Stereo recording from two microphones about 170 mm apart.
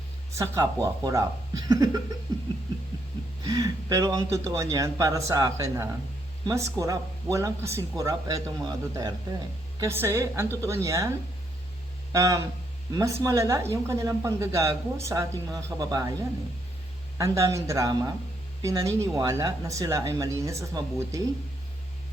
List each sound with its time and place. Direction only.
0.3 s a woman's voice: 20° right (ahead or behind)
3.4 s a woman's voice: 20° right (ahead or behind)
12.1 s a woman's voice: 20° right (ahead or behind)
17.2 s a woman's voice: 20° right (ahead or behind)